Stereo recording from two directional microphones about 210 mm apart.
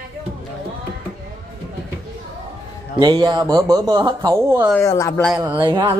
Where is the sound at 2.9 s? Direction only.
20° right (ahead or behind).